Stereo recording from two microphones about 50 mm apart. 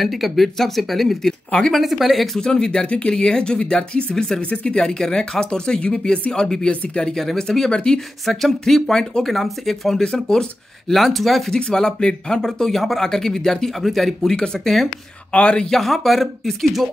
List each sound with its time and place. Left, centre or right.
0.0 s speech: centre
2.4 s speech: centre
6.7 s speech: left
7.0 s speech: centre
8.3 s speech: centre
10.9 s speech: centre
11.5 s speech: centre
14.3 s speech: centre
15.3 s speech: centre